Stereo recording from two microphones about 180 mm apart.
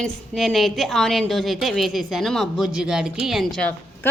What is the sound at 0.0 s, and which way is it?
A woman's voice, centre (ahead or behind).